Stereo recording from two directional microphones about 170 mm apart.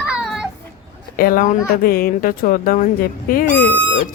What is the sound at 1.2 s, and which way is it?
Speech, 60° left (ahead or behind).